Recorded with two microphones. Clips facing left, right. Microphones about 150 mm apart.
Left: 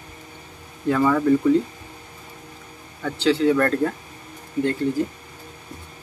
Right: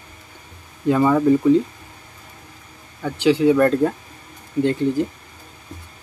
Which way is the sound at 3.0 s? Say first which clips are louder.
Right 3 dB; 15° right (ahead or behind).